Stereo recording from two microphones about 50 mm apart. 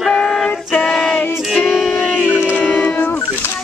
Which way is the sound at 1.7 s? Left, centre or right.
Centre.